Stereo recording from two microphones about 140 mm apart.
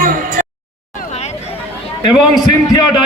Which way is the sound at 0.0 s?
75° right (ahead or behind).